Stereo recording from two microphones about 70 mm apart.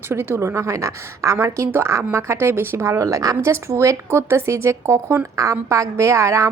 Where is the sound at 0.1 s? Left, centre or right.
Right.